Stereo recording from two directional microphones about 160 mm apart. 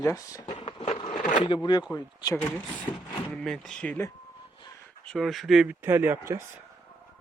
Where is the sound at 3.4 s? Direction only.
5° left (ahead or behind); by 6.4 s 15° right (ahead or behind).